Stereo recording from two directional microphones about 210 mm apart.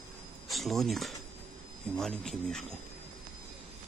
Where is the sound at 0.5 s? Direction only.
Centre (ahead or behind).